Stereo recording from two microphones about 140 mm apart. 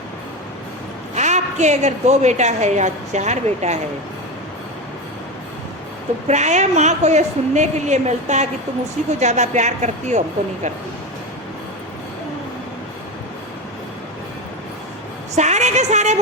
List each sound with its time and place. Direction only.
1.1 s a woman's voice: 55° right (ahead or behind)
6.2 s a woman's voice: 55° right (ahead or behind)
15.4 s a sound: 55° right (ahead or behind)